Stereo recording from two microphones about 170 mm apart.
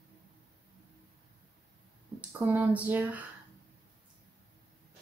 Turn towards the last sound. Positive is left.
turn(degrees=-10)  # may be behind; listen again after turning